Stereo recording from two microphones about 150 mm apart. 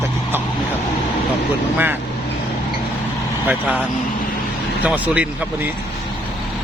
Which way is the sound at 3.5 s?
10° right (ahead or behind).